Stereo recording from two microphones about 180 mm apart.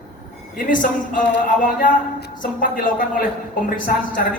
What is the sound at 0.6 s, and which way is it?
A woman's voice, 50° left (ahead or behind).